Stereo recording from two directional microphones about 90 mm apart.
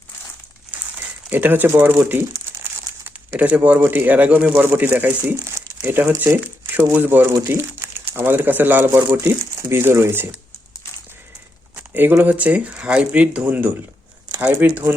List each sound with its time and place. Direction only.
1.3 s speech: 20° right (ahead or behind)
3.3 s speech: 15° right (ahead or behind)
9.1 s speech: 35° right (ahead or behind)
12.1 s speech: 20° right (ahead or behind)